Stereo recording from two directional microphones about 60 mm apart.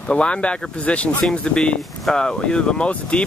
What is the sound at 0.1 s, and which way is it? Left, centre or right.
Speech, centre.